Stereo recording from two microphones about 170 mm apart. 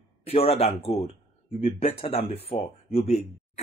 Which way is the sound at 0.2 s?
35° left (ahead or behind).